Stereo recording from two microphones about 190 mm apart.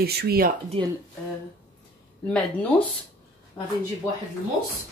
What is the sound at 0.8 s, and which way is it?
Speech, 30° right (ahead or behind).